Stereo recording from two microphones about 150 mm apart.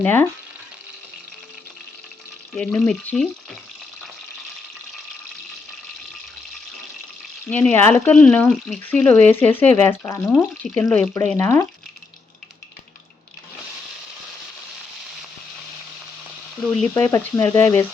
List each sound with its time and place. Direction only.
0.0 s speech: 10° left (ahead or behind)
2.6 s speech: 5° left (ahead or behind)
7.5 s speech: 10° left (ahead or behind)
16.8 s speech: 10° left (ahead or behind)